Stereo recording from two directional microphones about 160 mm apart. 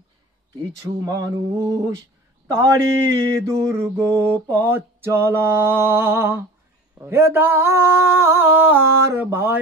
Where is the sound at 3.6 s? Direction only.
15° right (ahead or behind).